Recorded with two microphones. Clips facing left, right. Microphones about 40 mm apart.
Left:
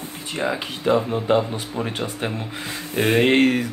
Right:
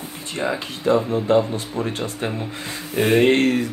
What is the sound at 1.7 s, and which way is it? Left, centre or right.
Speech, centre.